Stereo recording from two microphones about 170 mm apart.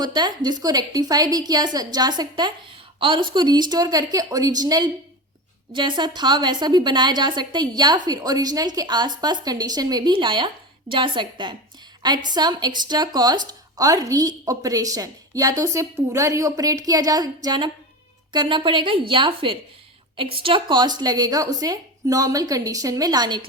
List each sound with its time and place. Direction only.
0.0 s a woman's voice: 25° right (ahead or behind)